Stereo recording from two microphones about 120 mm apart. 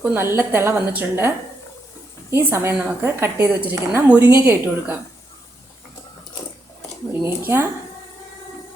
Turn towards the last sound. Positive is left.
turn(degrees=-20)  # may be behind; listen again after turning